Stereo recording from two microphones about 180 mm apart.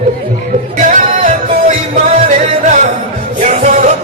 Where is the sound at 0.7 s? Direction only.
45° right (ahead or behind).